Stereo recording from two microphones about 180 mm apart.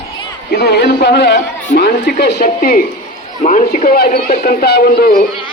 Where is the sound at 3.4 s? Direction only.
40° left (ahead or behind).